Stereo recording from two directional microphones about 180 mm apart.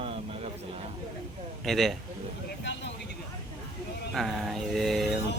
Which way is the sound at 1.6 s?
Centre (ahead or behind).